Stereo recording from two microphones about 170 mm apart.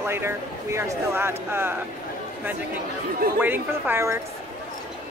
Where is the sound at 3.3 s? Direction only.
10° right (ahead or behind).